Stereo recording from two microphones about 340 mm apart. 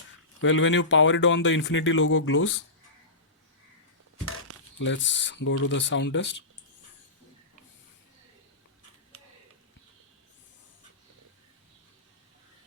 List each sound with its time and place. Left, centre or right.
0.4 s speech: left
4.8 s speech: left